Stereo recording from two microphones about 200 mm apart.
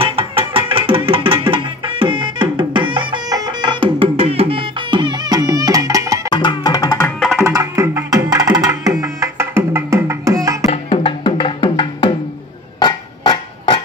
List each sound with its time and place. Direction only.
0.0 s music: 25° right (ahead or behind)
6.3 s music: 20° left (ahead or behind)
7.1 s music: 5° left (ahead or behind)
7.3 s music: 15° right (ahead or behind)
10.7 s music: 30° left (ahead or behind)
12.7 s a sound: 20° left (ahead or behind)